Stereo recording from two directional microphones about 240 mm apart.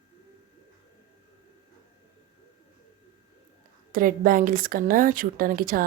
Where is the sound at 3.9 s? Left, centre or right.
Right.